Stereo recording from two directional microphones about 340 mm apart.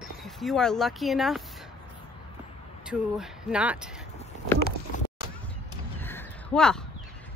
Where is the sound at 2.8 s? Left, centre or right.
Centre.